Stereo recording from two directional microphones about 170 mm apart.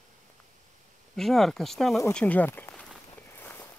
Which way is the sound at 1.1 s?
Centre (ahead or behind).